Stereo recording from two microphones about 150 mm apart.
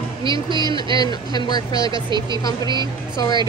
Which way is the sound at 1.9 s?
30° right (ahead or behind).